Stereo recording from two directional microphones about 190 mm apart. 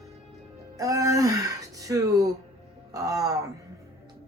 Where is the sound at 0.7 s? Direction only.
20° right (ahead or behind).